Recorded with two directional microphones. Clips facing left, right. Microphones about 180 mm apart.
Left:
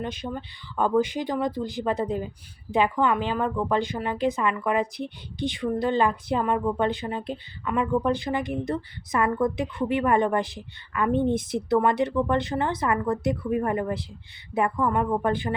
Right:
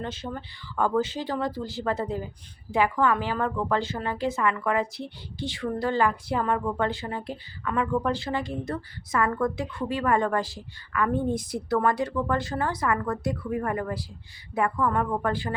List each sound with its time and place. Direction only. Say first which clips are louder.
0.0 s a woman's voice: left 2 dB; 15° left (ahead or behind)